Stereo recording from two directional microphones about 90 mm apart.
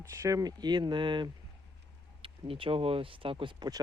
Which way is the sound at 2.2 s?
85° right.